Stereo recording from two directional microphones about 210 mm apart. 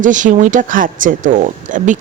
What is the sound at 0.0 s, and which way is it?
Speech, 35° right (ahead or behind).